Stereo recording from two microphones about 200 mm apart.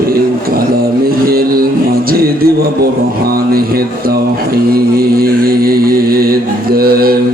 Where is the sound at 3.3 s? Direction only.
50° right (ahead or behind).